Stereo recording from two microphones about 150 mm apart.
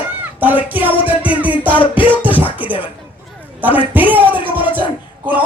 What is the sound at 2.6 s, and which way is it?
Speech, 10° right (ahead or behind).